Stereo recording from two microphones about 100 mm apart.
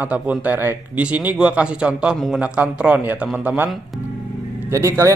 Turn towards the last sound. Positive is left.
turn(degrees=-30)  # may be behind; listen again after turning